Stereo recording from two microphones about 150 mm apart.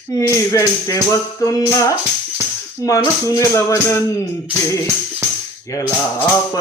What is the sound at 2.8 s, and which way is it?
Speech, 20° left (ahead or behind).